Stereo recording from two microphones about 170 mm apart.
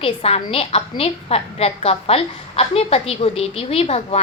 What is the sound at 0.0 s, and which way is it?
A woman's voice, 35° left (ahead or behind).